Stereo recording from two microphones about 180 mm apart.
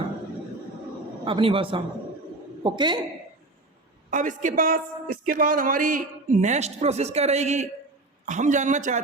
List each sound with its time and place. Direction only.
1.2 s a man's voice: 30° right (ahead or behind)
4.1 s a woman's voice: 45° right (ahead or behind)